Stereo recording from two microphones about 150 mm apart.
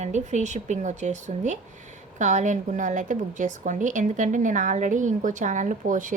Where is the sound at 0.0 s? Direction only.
50° right (ahead or behind).